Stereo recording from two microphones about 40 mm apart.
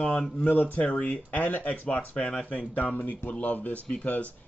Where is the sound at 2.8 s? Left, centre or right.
Left.